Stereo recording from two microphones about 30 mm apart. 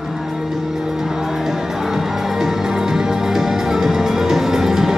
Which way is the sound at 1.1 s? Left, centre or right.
Centre.